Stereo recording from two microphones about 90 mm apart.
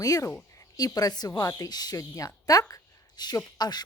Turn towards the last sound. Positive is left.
turn(degrees=50)  # may be behind; listen again after turning